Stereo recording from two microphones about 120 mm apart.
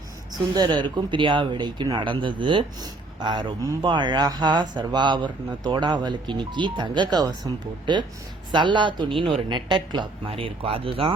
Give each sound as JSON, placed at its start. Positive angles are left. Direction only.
{"t": 0.3, "sound": "speech", "side_deg": -40}